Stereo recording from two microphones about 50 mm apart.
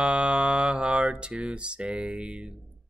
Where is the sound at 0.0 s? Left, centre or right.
Right.